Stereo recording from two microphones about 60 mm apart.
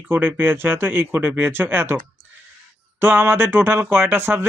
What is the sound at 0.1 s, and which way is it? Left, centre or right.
Speech, right.